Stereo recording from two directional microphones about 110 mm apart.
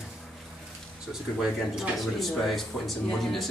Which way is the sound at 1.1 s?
5° right (ahead or behind).